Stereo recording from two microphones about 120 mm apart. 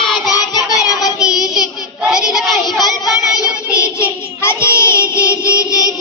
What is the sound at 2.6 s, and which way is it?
Child singing, 35° left (ahead or behind).